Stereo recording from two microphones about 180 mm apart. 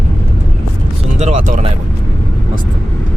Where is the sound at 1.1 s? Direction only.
40° right (ahead or behind).